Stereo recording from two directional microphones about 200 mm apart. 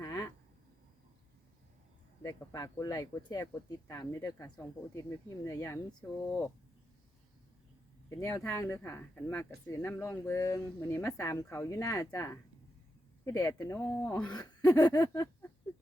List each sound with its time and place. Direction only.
0.0 s a sound: 15° left (ahead or behind)
2.2 s speech: 15° left (ahead or behind)
8.1 s speech: 15° left (ahead or behind)